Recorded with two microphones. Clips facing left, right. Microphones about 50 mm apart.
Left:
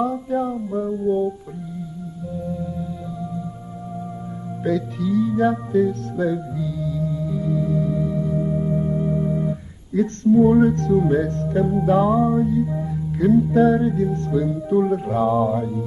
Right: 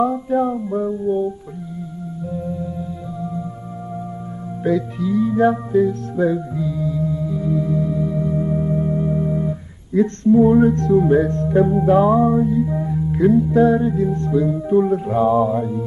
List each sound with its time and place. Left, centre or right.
0.0 s music: centre
1.0 s music: centre
2.6 s music: centre
4.6 s music: centre
9.9 s music: centre
13.4 s music: centre